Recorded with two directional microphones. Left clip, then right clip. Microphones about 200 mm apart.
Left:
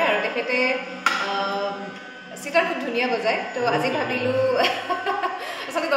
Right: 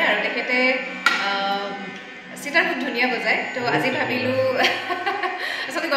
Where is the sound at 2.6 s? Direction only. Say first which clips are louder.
Right 1 dB; 20° left (ahead or behind).